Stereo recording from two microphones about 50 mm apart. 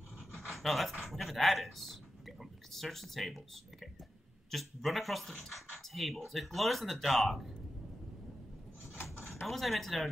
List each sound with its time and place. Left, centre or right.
0.3 s speech: centre
8.9 s drawer open or close: left
9.5 s speech: centre